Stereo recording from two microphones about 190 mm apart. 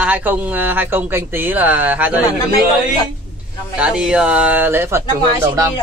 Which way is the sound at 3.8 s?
5° right (ahead or behind).